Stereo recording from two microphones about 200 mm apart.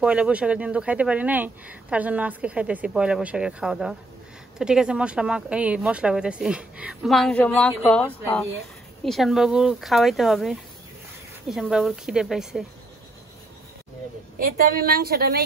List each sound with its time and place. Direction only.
0.0 s speech: 5° right (ahead or behind)
14.4 s a woman's voice: 45° right (ahead or behind)